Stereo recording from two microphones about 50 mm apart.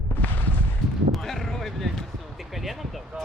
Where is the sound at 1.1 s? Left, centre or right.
Centre.